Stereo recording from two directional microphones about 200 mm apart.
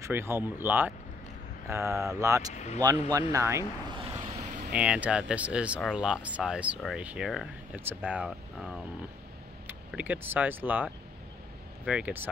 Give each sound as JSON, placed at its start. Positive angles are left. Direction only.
{"t": 0.0, "sound": "speech", "side_deg": -10}
{"t": 2.5, "sound": "speech", "side_deg": 35}
{"t": 2.8, "sound": "speech", "side_deg": -20}
{"t": 4.1, "sound": "vehicle", "side_deg": -30}
{"t": 4.7, "sound": "speech", "side_deg": -5}